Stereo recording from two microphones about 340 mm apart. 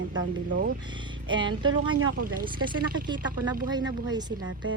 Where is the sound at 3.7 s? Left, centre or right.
Centre.